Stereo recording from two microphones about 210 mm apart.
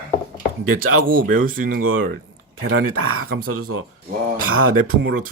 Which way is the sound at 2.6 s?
75° right (ahead or behind).